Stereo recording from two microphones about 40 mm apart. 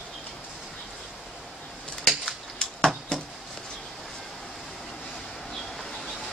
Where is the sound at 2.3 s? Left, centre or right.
Centre.